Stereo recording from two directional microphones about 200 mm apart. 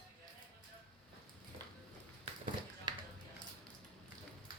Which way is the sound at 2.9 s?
20° right (ahead or behind).